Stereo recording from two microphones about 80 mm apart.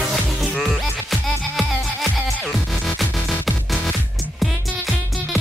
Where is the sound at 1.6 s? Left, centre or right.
Centre.